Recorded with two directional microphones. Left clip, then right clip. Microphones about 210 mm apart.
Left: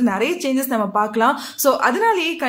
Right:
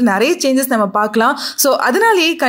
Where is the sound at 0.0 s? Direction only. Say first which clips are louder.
Right 6 dB; 30° right (ahead or behind).